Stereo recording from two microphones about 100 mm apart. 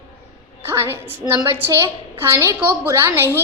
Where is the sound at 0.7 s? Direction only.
30° right (ahead or behind).